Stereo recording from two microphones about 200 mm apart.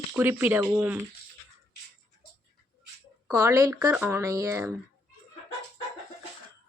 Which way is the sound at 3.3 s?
10° right (ahead or behind).